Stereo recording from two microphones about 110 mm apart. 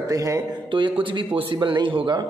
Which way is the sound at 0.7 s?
50° right (ahead or behind).